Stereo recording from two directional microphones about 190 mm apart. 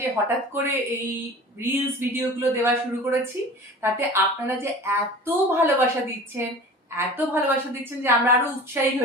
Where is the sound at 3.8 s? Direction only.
10° right (ahead or behind).